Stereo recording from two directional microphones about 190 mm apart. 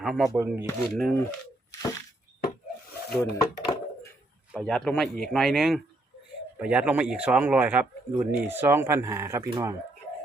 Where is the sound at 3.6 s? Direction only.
20° left (ahead or behind).